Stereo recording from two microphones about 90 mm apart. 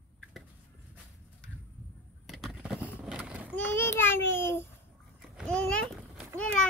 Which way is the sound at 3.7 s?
25° left (ahead or behind).